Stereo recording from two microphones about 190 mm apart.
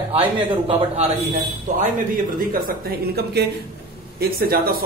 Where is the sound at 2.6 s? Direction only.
55° right (ahead or behind).